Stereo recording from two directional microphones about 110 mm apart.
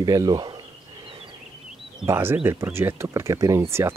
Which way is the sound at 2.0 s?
25° right (ahead or behind).